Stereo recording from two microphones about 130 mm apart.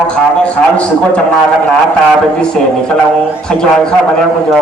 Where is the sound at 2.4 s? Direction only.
5° left (ahead or behind).